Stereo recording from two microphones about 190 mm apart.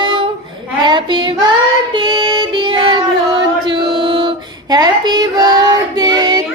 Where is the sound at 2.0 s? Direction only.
25° right (ahead or behind).